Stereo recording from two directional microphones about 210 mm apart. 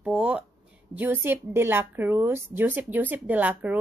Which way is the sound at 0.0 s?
5° right (ahead or behind).